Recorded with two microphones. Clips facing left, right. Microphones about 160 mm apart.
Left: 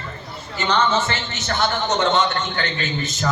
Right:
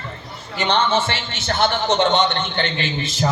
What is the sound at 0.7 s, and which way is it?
A man's voice, 30° right (ahead or behind).